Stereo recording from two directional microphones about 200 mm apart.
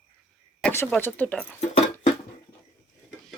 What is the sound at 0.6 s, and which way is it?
Speech, 10° left (ahead or behind).